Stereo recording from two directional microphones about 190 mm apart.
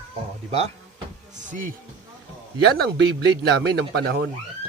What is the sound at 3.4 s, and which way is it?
Speech, 70° right (ahead or behind).